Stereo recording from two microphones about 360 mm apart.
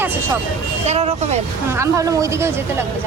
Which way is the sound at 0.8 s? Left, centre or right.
Centre.